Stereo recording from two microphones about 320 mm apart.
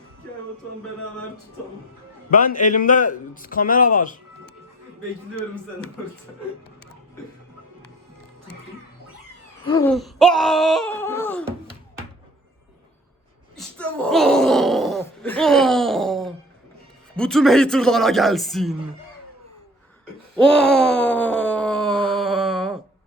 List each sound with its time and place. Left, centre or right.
2.3 s a man's voice: left
9.6 s a sound: centre
9.9 s speech: centre
13.6 s groan: centre
17.2 s speech: centre
20.3 s groan: centre
22.1 s a sound: centre